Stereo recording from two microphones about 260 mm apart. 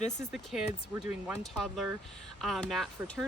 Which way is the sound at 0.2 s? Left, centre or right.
Centre.